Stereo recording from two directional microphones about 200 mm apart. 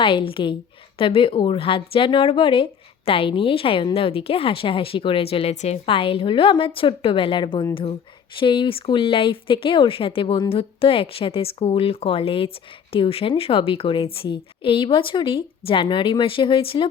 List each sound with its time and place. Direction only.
0.0 s a woman's voice: 25° left (ahead or behind)